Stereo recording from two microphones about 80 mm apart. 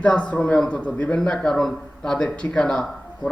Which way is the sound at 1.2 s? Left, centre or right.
Centre.